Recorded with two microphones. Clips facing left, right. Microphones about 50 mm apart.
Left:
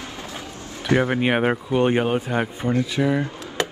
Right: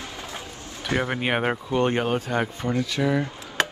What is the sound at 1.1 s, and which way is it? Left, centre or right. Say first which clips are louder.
Speech: left 4 dB; centre.